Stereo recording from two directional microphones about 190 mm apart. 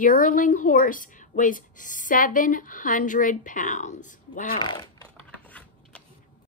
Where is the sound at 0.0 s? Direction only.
45° left (ahead or behind).